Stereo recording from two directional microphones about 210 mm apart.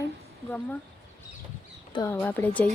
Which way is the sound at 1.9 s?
10° left (ahead or behind).